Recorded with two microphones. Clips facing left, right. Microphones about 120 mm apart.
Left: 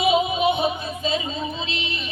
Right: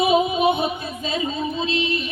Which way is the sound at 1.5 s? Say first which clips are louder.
Right 7 dB; 45° right (ahead or behind).